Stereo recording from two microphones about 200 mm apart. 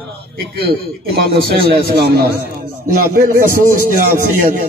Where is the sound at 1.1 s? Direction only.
50° right (ahead or behind).